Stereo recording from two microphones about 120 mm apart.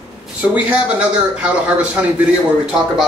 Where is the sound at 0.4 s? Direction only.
15° right (ahead or behind).